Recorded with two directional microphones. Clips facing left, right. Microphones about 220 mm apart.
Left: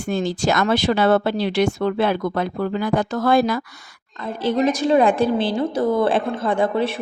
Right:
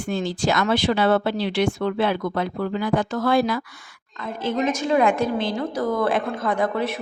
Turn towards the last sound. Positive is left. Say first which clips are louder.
# left 3 dB
turn(degrees=30)  # may be behind; listen again after turning